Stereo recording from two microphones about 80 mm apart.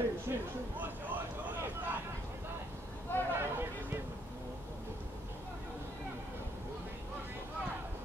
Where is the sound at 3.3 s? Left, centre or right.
Right.